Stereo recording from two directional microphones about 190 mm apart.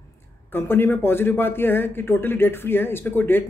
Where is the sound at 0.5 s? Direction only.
10° left (ahead or behind).